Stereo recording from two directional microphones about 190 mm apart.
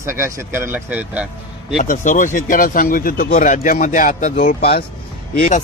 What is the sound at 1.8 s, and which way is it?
Speech, 45° left (ahead or behind).